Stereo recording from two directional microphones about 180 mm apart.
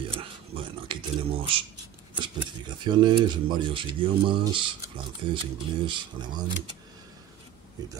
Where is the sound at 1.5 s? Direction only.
30° right (ahead or behind).